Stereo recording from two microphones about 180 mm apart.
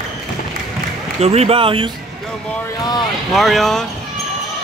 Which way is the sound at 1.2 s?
35° right (ahead or behind).